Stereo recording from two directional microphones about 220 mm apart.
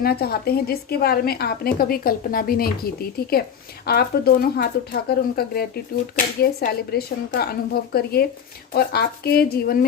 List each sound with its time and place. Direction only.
0.0 s speech: 45° left (ahead or behind)